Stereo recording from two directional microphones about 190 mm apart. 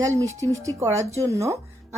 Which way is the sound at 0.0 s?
15° right (ahead or behind).